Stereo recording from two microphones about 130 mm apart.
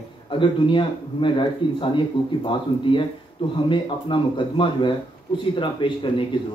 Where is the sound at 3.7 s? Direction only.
40° left (ahead or behind).